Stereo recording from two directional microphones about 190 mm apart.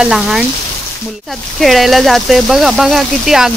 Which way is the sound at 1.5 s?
Centre (ahead or behind).